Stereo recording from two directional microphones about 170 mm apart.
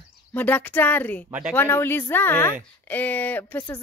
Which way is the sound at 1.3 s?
5° right (ahead or behind).